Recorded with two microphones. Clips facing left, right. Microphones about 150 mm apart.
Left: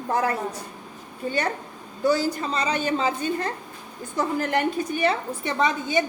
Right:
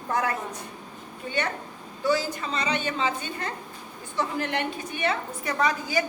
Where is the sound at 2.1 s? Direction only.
40° left (ahead or behind).